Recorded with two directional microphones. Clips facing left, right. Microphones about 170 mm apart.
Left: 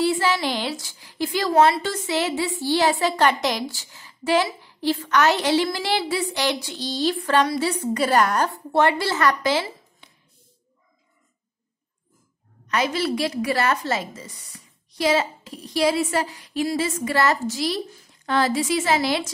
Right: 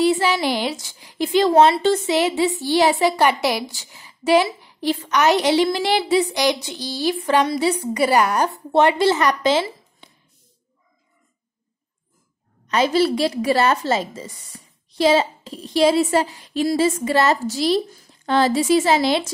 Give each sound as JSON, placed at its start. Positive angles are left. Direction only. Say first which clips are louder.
{"t": 0.0, "sound": "a woman's voice", "louder": "right 3 dB", "side_deg": -15}
{"t": 12.6, "sound": "a woman's voice", "louder": "right 6 dB", "side_deg": -30}